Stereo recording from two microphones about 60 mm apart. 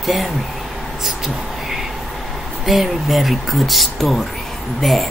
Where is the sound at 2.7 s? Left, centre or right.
Centre.